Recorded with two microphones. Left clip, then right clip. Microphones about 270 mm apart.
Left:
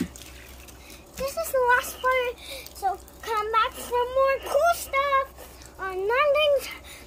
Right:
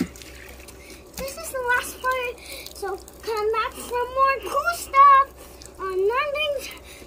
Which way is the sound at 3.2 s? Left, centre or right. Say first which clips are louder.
Even; centre.